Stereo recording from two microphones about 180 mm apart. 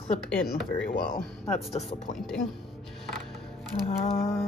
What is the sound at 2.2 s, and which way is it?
Speech, centre (ahead or behind).